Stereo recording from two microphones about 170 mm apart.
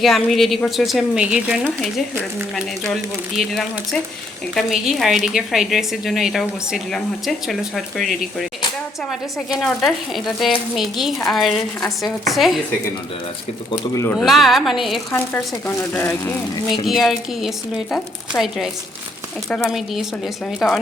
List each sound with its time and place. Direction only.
0.0 s a woman's voice: centre (ahead or behind)
2.9 s a woman's voice: centre (ahead or behind)
13.7 s speech: 15° left (ahead or behind)
14.3 s a woman's voice: centre (ahead or behind)
15.1 s speech: 10° left (ahead or behind)
16.8 s a woman's voice: centre (ahead or behind)